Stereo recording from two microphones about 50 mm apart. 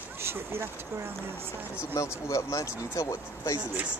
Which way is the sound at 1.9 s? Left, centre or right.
Left.